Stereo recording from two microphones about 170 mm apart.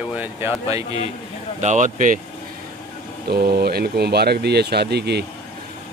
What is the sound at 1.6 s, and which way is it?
Speech, 45° right (ahead or behind).